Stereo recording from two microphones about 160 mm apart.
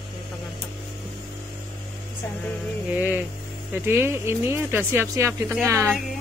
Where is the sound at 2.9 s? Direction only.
10° right (ahead or behind).